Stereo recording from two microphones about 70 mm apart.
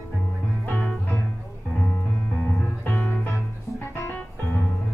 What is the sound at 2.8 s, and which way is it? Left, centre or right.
Music, left.